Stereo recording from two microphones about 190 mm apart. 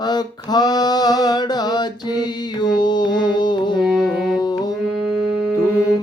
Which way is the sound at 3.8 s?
Centre (ahead or behind).